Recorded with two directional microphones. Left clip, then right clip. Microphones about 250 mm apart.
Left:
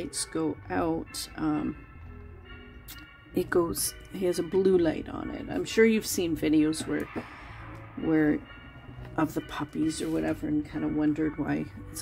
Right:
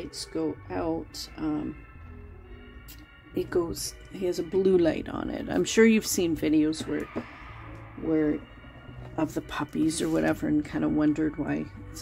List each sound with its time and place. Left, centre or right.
0.0 s speech: centre
3.3 s speech: centre
8.1 s speech: left
9.1 s speech: centre
9.5 s speech: centre
11.1 s speech: centre